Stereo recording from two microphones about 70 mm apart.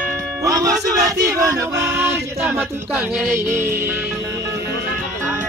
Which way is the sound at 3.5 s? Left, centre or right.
Right.